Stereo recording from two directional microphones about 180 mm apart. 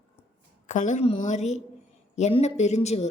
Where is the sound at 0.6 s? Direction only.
45° left (ahead or behind).